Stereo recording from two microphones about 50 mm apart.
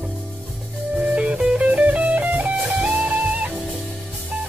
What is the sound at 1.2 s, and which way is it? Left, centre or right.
Music, right.